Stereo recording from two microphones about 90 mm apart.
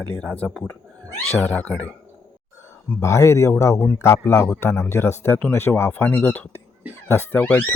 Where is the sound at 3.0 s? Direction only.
35° left (ahead or behind).